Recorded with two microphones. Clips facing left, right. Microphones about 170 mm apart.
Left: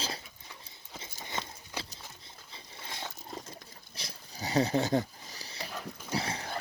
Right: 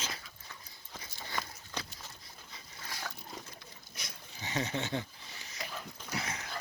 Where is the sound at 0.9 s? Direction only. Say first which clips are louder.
Left 1 dB; 25° left (ahead or behind).